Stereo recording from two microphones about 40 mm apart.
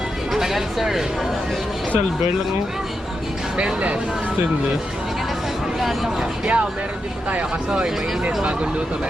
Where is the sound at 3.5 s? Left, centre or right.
Right.